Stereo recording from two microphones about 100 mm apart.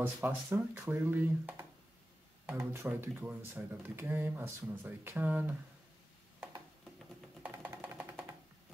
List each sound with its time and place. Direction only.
0.0 s speech: 20° right (ahead or behind)
7.7 s music: 25° right (ahead or behind)